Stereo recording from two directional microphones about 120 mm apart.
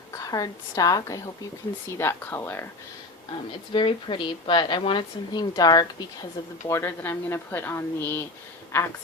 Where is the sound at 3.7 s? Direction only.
45° left (ahead or behind).